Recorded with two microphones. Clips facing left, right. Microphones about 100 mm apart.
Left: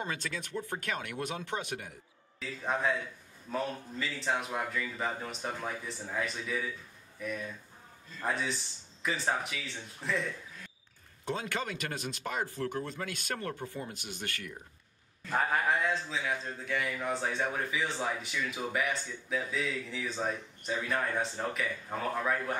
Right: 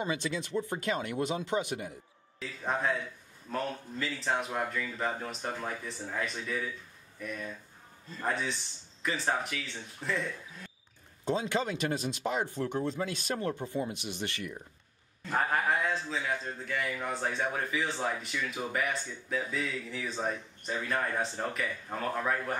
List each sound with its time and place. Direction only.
0.0 s speech: 15° right (ahead or behind)
2.6 s a man's voice: centre (ahead or behind)
11.2 s speech: 20° right (ahead or behind)
15.2 s a man's voice: centre (ahead or behind)